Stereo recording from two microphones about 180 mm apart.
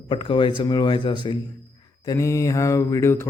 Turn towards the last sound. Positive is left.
turn(degrees=15)  # may be behind; listen again after turning